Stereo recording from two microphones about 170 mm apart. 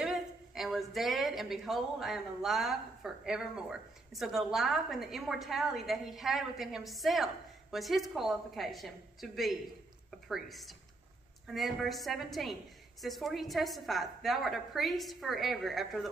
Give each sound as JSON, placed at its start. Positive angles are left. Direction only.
{"t": 0.0, "sound": "a woman's voice", "side_deg": 0}